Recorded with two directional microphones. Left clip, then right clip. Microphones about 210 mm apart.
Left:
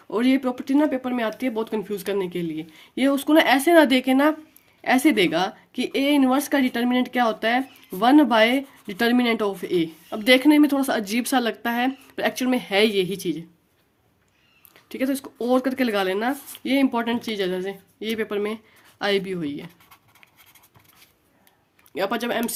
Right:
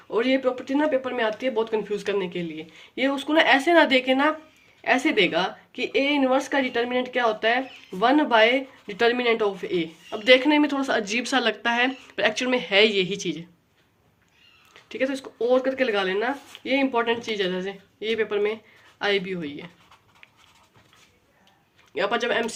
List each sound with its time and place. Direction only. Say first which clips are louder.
0.1 s speech: even; 50° left (ahead or behind); by 13.4 s 30° left (ahead or behind)
14.7 s speech: even; 45° left (ahead or behind)
21.9 s speech: right 1 dB; 40° left (ahead or behind)